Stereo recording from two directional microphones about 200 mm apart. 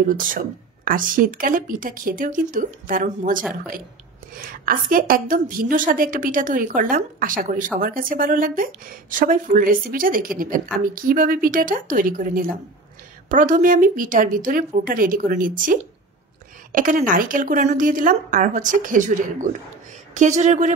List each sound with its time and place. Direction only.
0.1 s a woman's voice: 40° right (ahead or behind)